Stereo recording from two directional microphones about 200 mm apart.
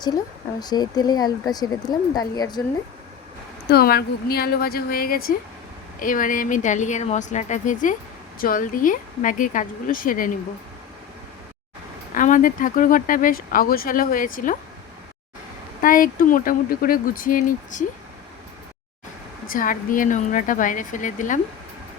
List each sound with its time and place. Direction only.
0.6 s speech: 20° left (ahead or behind)
3.7 s a woman's voice: 50° left (ahead or behind)
12.1 s speech: 40° left (ahead or behind)
15.8 s speech: 45° left (ahead or behind)
19.5 s a woman's voice: 45° left (ahead or behind)